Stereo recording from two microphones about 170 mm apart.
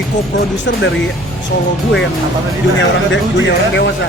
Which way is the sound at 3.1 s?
90° left.